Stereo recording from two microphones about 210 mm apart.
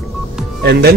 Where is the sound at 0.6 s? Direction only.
50° right (ahead or behind).